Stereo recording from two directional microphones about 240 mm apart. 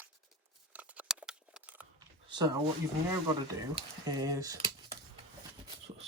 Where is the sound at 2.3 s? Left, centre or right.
Centre.